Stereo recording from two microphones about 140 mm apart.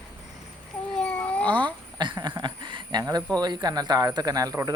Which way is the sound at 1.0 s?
5° left (ahead or behind).